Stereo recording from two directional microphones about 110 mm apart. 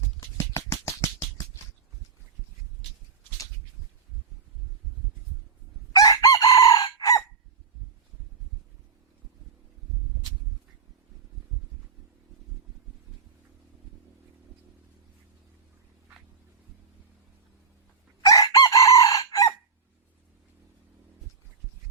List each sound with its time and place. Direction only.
0.2 s a sound: 25° left (ahead or behind)
6.0 s chicken: 35° left (ahead or behind)
18.3 s chicken: 30° left (ahead or behind)